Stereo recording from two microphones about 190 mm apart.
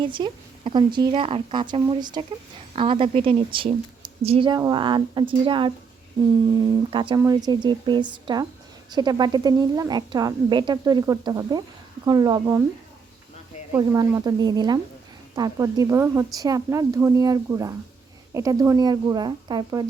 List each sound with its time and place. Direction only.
0.0 s a woman's voice: 25° right (ahead or behind)
13.7 s a woman's voice: 15° right (ahead or behind)